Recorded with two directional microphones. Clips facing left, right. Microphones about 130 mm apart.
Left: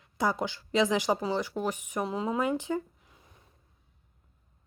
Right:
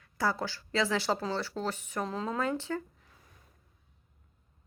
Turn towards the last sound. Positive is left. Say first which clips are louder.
# left 4 dB
turn(degrees=15)  # may be behind; listen again after turning